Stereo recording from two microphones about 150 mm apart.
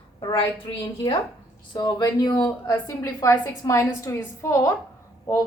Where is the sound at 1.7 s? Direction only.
25° left (ahead or behind).